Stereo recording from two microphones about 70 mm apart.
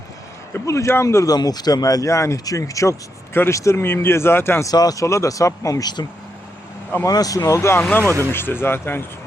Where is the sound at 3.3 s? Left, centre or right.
Left.